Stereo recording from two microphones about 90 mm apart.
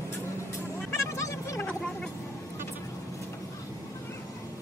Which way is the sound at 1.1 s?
35° left (ahead or behind).